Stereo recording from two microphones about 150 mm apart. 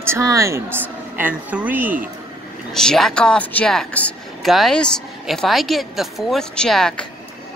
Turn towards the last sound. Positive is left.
turn(degrees=5)  # may be behind; listen again after turning